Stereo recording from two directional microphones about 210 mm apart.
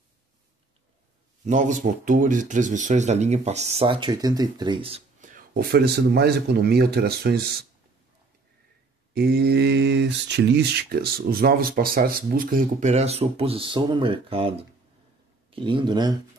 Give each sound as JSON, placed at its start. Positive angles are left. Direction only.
{"t": 1.4, "sound": "speech", "side_deg": -35}
{"t": 9.1, "sound": "speech", "side_deg": -50}
{"t": 15.5, "sound": "speech", "side_deg": -25}